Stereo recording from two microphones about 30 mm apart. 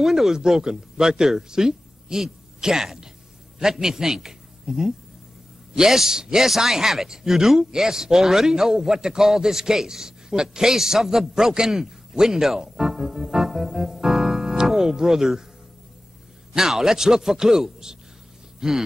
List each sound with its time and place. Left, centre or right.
0.0 s a man's voice: centre
16.5 s a man's voice: centre